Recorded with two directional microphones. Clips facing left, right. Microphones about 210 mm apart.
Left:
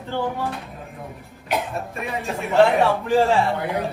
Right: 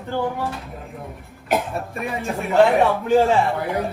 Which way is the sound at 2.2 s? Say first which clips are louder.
Right 1 dB; centre (ahead or behind).